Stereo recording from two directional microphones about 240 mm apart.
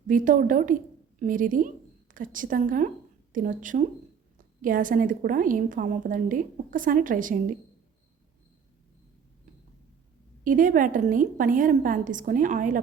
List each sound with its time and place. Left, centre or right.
0.1 s a woman's voice: right
10.4 s a woman's voice: right